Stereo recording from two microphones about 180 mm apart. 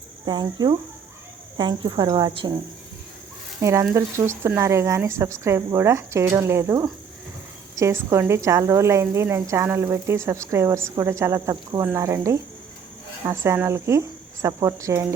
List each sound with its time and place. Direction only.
0.3 s speech: 25° right (ahead or behind)
3.6 s a woman's voice: 15° right (ahead or behind)